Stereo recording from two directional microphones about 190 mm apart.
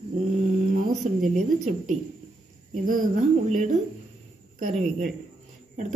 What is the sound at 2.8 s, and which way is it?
A woman's voice, 45° right (ahead or behind).